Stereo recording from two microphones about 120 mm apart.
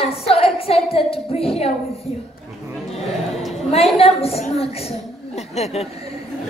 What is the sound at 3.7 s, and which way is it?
A woman's voice, 55° left (ahead or behind).